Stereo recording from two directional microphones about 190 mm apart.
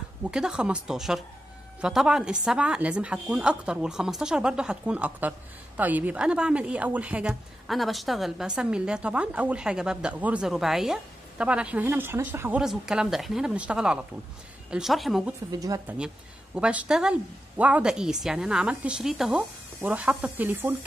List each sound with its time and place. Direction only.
0.2 s a woman's voice: 5° right (ahead or behind)
15.5 s speech: 20° right (ahead or behind)
16.5 s a woman's voice: 5° right (ahead or behind)